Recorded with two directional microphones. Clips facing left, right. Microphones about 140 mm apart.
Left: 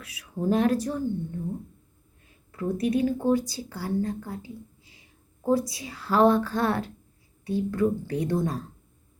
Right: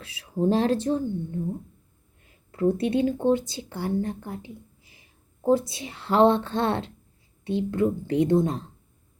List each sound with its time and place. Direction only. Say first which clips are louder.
0.0 s speech: right 4 dB; 30° right (ahead or behind)
2.5 s speech: right 3 dB; 30° right (ahead or behind)
4.8 s whispering: left 1 dB; 25° left (ahead or behind)
5.4 s speech: right 2 dB; 25° right (ahead or behind)